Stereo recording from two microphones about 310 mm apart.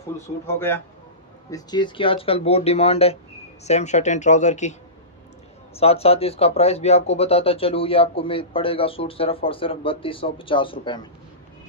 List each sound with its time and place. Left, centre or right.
0.5 s speech: centre
5.8 s speech: centre